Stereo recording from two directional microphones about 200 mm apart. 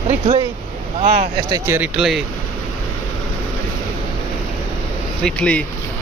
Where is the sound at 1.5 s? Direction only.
10° right (ahead or behind).